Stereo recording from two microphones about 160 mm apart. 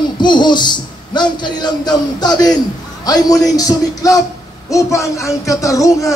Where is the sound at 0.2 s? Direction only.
30° left (ahead or behind).